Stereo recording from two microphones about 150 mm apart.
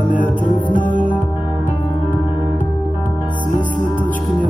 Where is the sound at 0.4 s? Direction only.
60° left (ahead or behind).